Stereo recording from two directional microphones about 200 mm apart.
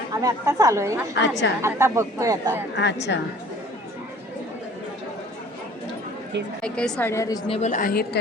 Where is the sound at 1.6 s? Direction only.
15° right (ahead or behind).